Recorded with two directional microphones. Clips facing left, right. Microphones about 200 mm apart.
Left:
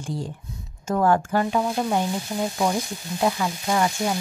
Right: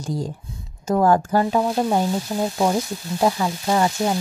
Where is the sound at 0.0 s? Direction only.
40° right (ahead or behind).